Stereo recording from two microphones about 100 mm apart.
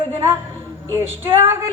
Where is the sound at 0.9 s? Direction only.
25° right (ahead or behind).